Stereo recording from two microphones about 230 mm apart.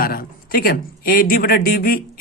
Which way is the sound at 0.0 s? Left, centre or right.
Left.